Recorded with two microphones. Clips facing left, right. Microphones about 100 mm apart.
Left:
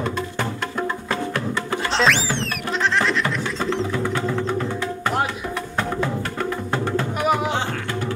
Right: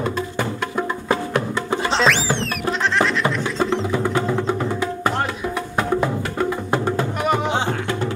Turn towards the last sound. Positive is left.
turn(degrees=5)  # may be behind; listen again after turning